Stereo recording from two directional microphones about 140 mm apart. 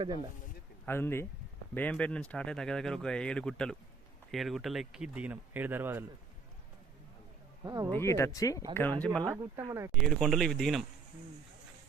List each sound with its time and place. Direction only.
0.9 s speech: 15° left (ahead or behind); by 6.1 s 15° right (ahead or behind)
7.6 s speech: 30° right (ahead or behind)
7.9 s speech: 20° left (ahead or behind)
8.7 s speech: 15° left (ahead or behind)
9.3 s speech: 20° right (ahead or behind)
9.9 s speech: 5° left (ahead or behind)